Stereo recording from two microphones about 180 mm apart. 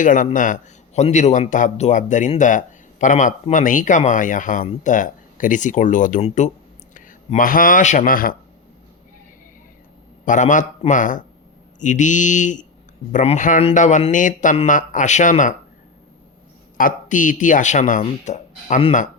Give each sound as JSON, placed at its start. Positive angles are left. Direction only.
{"t": 0.0, "sound": "a man's voice", "side_deg": 45}
{"t": 10.2, "sound": "speech", "side_deg": 45}
{"t": 16.7, "sound": "speech", "side_deg": 50}